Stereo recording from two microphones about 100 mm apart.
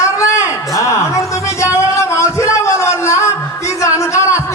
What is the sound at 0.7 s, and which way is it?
Music, 30° left (ahead or behind).